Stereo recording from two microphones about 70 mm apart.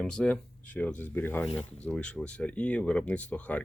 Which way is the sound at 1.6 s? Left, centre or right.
Centre.